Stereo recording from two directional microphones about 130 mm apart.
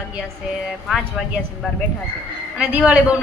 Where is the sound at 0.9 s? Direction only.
Centre (ahead or behind).